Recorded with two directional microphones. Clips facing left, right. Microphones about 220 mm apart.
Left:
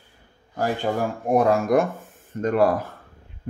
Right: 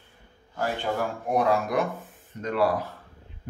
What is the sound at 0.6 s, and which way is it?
Speech, 45° left (ahead or behind).